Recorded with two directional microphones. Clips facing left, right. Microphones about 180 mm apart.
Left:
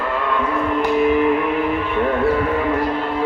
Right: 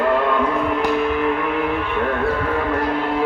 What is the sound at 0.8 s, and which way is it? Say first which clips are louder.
Music: left 5 dB; 5° left (ahead or behind).